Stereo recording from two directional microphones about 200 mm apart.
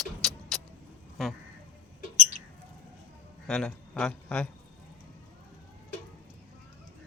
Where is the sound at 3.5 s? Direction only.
5° left (ahead or behind).